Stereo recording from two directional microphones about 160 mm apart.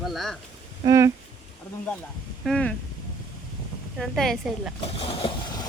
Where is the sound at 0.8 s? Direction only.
20° right (ahead or behind).